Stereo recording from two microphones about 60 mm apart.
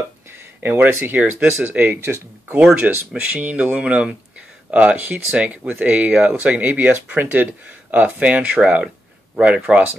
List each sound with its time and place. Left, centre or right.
0.3 s a sound: right
0.9 s speech: right
2.0 s speech: right
2.9 s speech: right